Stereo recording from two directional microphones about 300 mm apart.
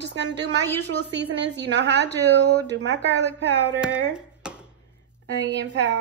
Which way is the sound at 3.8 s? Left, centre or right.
Centre.